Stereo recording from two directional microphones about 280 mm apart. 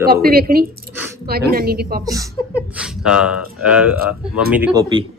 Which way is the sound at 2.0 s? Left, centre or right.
Centre.